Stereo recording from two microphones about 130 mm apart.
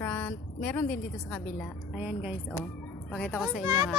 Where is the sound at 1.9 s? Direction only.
10° right (ahead or behind).